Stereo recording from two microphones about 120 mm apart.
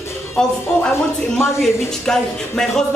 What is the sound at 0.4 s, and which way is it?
Speech, 5° left (ahead or behind).